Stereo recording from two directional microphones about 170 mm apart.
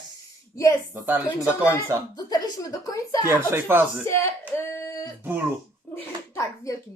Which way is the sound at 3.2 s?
15° right (ahead or behind).